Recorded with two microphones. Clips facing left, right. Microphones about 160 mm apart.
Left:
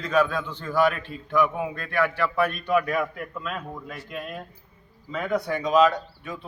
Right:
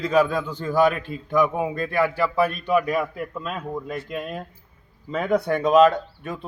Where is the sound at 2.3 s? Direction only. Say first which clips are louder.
Right 3 dB; 30° right (ahead or behind).